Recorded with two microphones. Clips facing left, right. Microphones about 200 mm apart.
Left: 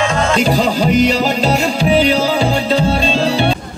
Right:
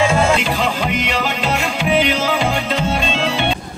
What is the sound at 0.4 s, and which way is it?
Music, 40° left (ahead or behind).